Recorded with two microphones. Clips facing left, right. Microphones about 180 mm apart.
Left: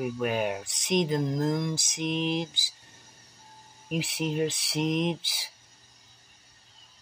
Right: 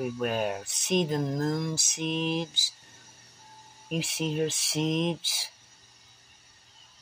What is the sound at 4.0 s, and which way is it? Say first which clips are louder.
Speech: left 1 dB; 65° left (ahead or behind).